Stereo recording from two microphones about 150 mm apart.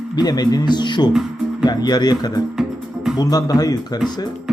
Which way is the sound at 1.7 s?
25° left (ahead or behind).